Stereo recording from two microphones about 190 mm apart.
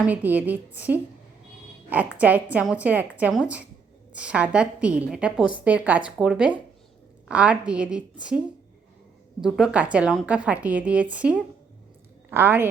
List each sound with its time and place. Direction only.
0.0 s a woman's voice: 10° right (ahead or behind)
2.1 s a woman's voice: 10° right (ahead or behind)